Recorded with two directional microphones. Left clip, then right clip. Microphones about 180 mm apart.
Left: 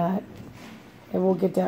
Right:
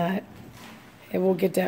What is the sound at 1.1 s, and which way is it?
Speech, centre (ahead or behind).